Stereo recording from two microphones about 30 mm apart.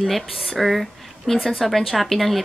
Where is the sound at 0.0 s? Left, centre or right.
Centre.